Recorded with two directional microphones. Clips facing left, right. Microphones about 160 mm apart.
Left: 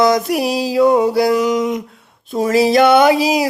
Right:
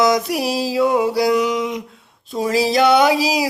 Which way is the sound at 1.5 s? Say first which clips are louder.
Left 4 dB; 45° left (ahead or behind).